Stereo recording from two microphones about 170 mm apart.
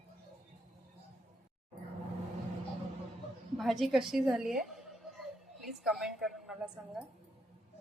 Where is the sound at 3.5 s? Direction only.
Centre (ahead or behind).